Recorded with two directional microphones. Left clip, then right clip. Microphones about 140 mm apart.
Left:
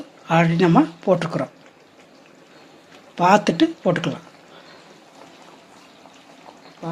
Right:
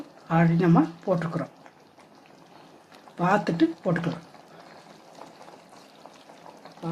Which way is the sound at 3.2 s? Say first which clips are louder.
Left 7 dB; 35° left (ahead or behind).